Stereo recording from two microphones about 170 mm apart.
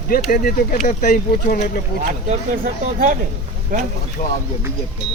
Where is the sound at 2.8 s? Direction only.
50° right (ahead or behind).